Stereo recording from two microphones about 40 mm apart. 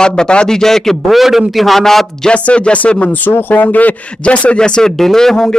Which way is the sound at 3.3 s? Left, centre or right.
Left.